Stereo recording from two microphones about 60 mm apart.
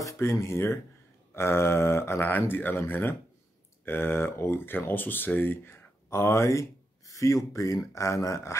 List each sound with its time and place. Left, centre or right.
0.2 s speech: left
7.1 s speech: left